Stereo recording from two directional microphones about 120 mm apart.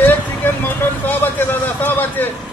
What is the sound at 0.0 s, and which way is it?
Vehicle, 15° left (ahead or behind).